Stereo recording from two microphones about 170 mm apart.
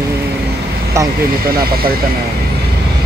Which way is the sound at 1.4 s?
60° right (ahead or behind).